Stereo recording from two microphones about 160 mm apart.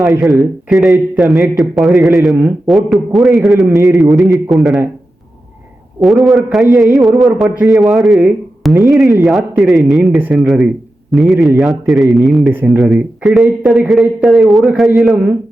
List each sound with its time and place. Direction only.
0.2 s a man's voice: centre (ahead or behind)
6.0 s a man's voice: centre (ahead or behind)
12.5 s speech: 10° right (ahead or behind)
12.8 s a man's voice: centre (ahead or behind)